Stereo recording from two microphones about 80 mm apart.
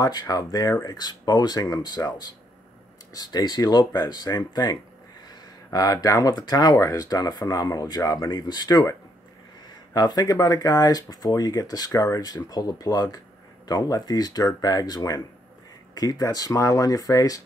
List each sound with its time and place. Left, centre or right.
0.0 s speech: left
9.9 s speech: left